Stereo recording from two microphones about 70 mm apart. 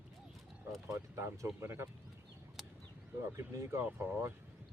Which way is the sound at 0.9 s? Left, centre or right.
Right.